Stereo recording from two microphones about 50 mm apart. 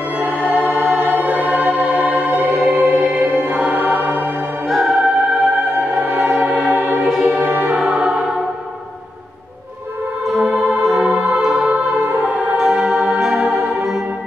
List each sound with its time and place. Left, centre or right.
0.5 s music: right
3.7 s music: right
4.6 s music: centre
6.0 s music: right
6.3 s music: right
6.8 s music: right
7.9 s music: centre
10.4 s music: right
11.0 s music: right
12.3 s music: centre